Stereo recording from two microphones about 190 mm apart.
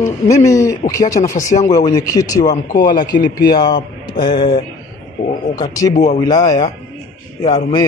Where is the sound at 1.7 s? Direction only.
20° left (ahead or behind).